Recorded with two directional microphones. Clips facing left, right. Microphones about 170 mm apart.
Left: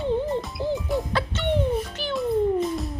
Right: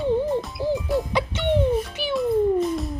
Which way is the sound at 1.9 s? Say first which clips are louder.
Right 3 dB; 10° right (ahead or behind).